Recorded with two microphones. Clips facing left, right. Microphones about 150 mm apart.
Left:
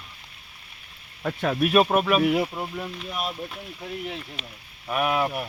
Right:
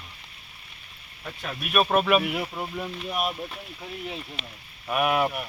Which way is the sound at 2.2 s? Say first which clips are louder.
Left 8 dB; 30° left (ahead or behind).